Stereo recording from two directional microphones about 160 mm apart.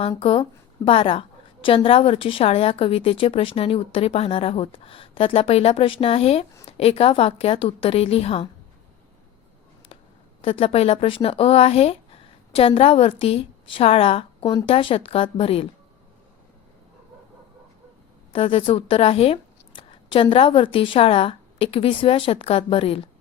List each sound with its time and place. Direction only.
0.2 s a woman's voice: 35° left (ahead or behind)
10.4 s a woman's voice: 35° left (ahead or behind)
18.3 s a woman's voice: 35° left (ahead or behind)